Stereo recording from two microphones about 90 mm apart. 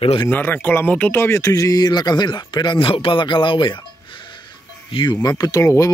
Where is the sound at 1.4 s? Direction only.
40° left (ahead or behind); by 2.9 s 60° left (ahead or behind).